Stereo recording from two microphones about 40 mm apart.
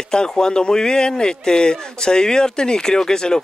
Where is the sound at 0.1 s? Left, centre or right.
Centre.